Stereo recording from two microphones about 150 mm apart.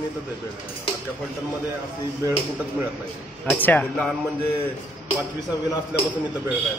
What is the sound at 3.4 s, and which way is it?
Speech, 10° left (ahead or behind).